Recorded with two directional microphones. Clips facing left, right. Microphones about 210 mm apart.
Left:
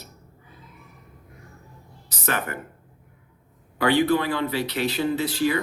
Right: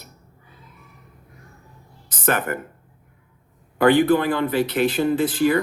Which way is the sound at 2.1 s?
50° right (ahead or behind).